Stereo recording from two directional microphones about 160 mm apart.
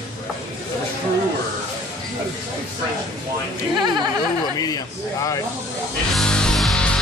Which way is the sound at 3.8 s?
25° right (ahead or behind).